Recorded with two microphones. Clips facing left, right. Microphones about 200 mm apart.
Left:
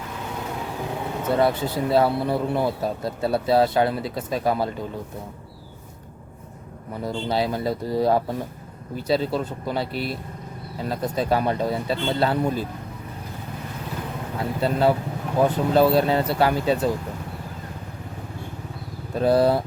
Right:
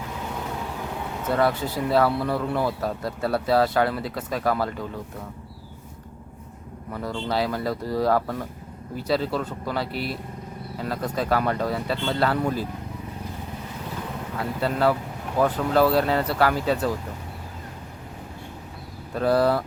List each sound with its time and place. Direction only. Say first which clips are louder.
1.3 s speech: left 2 dB; 25° left (ahead or behind)
6.9 s speech: left 2 dB; 25° left (ahead or behind)
14.6 s speech: left 2 dB; 25° left (ahead or behind)
19.1 s speech: left 2 dB; 25° left (ahead or behind)